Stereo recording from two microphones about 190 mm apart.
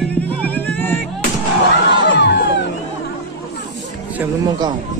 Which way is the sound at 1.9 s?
65° left (ahead or behind).